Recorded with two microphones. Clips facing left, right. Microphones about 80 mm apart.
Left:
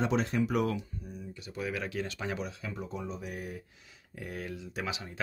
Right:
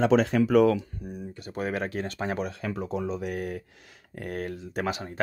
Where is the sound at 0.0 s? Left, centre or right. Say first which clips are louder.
Right 8 dB; right.